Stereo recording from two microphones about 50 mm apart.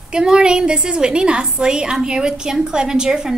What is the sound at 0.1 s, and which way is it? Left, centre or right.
A woman's voice, centre.